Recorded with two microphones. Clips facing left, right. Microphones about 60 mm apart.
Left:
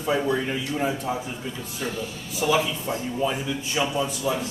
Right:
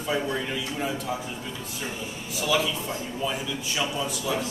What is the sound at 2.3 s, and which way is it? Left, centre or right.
A man's voice, left.